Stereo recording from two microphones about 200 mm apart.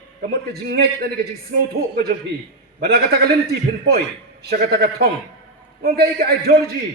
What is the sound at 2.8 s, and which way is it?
Speech, 55° right (ahead or behind).